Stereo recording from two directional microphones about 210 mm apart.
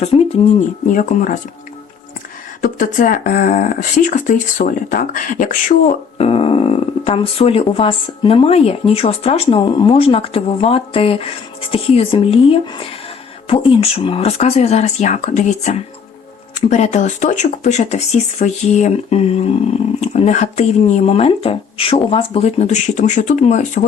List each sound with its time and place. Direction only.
0.0 s speech: 30° left (ahead or behind)
2.6 s speech: 40° left (ahead or behind)
6.1 s speech: 30° left (ahead or behind)